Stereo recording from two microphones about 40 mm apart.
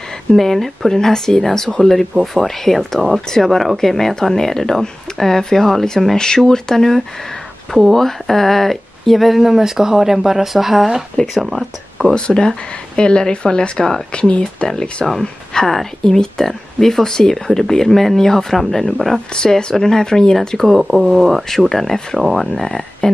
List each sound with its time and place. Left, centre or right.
0.3 s speech: centre
6.1 s speech: centre
12.1 s speech: left
15.0 s speech: centre
19.1 s speech: centre
20.3 s speech: centre
20.8 s speech: centre
21.5 s speech: centre
22.7 s speech: centre